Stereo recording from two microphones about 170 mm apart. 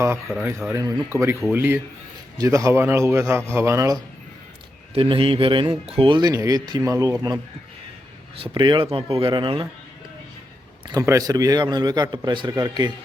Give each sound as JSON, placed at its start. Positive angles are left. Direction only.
{"t": 0.4, "sound": "a man's voice", "side_deg": -10}
{"t": 4.9, "sound": "a man's voice", "side_deg": -30}
{"t": 8.4, "sound": "a man's voice", "side_deg": -30}
{"t": 10.8, "sound": "a man's voice", "side_deg": -20}